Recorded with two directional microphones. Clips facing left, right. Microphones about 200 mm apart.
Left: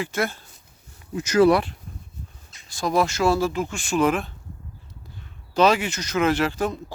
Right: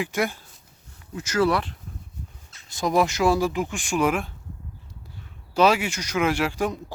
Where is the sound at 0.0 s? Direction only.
15° right (ahead or behind).